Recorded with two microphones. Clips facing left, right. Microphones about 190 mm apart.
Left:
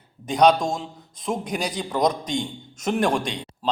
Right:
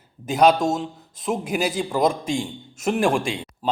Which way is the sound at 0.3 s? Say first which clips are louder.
Right 1 dB; 5° right (ahead or behind).